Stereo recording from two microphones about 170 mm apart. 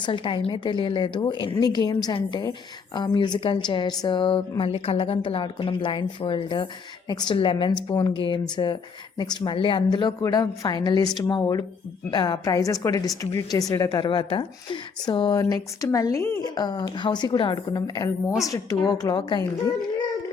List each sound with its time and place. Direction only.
0.0 s a woman's voice: 30° left (ahead or behind)